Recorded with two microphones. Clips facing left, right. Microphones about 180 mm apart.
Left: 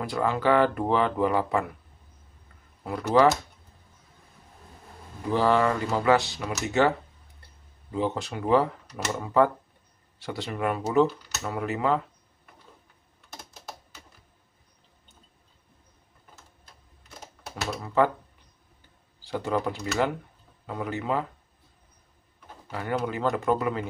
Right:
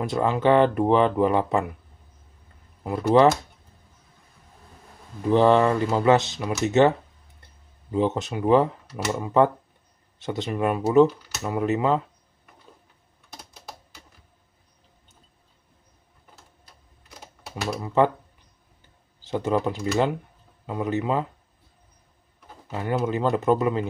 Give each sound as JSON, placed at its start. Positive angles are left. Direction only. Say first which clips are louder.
{"t": 0.0, "sound": "speech", "louder": "right 4 dB", "side_deg": -20}
{"t": 2.8, "sound": "speech", "louder": "right 4 dB", "side_deg": -25}
{"t": 5.3, "sound": "speech", "louder": "right 5 dB", "side_deg": -20}
{"t": 7.9, "sound": "speech", "louder": "right 5 dB", "side_deg": -20}
{"t": 17.6, "sound": "typewriter", "louder": "right 3 dB", "side_deg": -15}
{"t": 19.2, "sound": "speech", "louder": "right 4 dB", "side_deg": -20}
{"t": 22.7, "sound": "speech", "louder": "right 4 dB", "side_deg": -20}